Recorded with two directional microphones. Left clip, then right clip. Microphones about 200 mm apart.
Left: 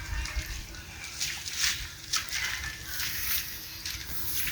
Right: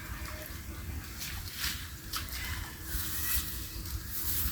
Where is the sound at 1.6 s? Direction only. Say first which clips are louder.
Left 7 dB; 25° right (ahead or behind).